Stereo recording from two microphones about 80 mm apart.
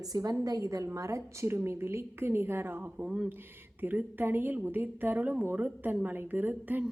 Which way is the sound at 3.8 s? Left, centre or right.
Right.